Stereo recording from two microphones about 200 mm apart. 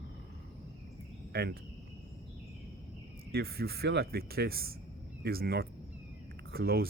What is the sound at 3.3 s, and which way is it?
Speech, 50° right (ahead or behind).